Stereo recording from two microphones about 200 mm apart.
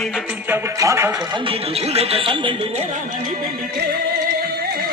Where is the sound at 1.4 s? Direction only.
30° right (ahead or behind).